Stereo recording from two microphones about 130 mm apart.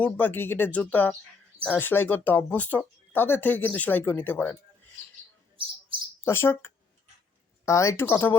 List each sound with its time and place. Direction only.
0.0 s speech: 15° left (ahead or behind)
5.6 s chirp: 40° right (ahead or behind)
6.2 s speech: 20° left (ahead or behind)